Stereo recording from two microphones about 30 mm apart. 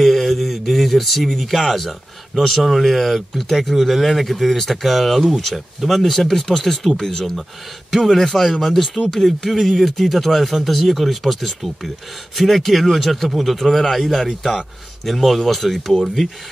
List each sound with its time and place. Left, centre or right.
0.0 s a sound: centre
1.6 s a man's voice: centre
1.9 s speech: centre
7.0 s a man's voice: centre
8.5 s speech: centre